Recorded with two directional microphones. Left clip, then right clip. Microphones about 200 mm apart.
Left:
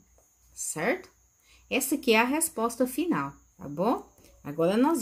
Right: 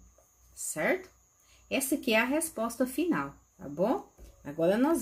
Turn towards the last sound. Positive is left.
turn(degrees=30)  # may be behind; listen again after turning